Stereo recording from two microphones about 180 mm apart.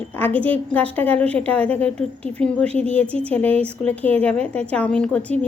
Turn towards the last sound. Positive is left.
turn(degrees=5)  # may be behind; listen again after turning